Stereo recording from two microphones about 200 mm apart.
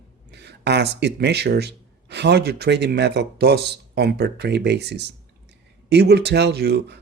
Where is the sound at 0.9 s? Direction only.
55° right (ahead or behind).